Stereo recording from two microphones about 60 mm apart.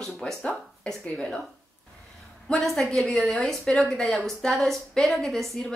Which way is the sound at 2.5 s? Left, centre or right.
Centre.